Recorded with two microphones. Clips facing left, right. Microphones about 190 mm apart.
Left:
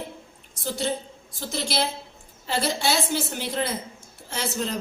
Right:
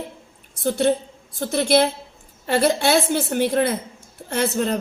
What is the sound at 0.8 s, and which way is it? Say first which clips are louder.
A woman's voice: right 8 dB; 60° right (ahead or behind).